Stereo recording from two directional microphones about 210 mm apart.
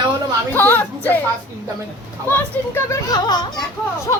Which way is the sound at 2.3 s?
10° left (ahead or behind).